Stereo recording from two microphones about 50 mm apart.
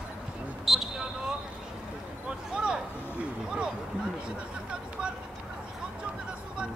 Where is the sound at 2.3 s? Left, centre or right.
Centre.